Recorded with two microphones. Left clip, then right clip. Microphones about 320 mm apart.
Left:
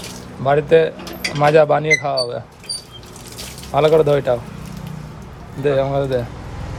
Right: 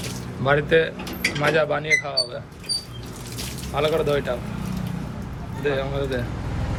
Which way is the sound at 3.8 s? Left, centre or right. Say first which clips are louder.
Left 8 dB; centre.